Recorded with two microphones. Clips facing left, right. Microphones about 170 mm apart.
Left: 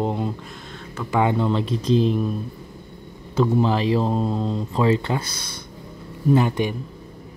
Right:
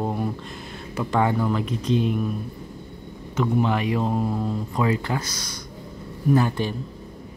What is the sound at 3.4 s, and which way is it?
Speech, 30° left (ahead or behind).